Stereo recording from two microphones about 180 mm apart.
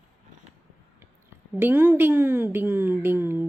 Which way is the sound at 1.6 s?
10° right (ahead or behind).